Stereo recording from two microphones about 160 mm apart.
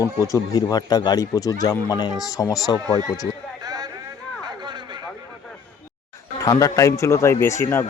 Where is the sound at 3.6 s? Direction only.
25° right (ahead or behind).